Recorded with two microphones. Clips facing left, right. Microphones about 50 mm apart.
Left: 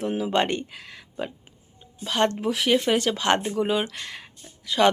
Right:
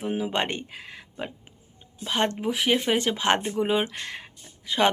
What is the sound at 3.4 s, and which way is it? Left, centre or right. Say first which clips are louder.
Speech: left 1 dB; centre.